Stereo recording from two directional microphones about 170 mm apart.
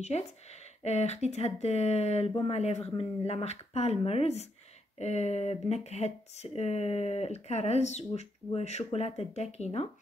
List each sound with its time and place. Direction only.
0.0 s speech: 40° left (ahead or behind)